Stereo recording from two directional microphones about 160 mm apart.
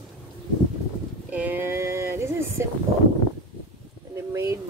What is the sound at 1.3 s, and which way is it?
Speech, 10° right (ahead or behind).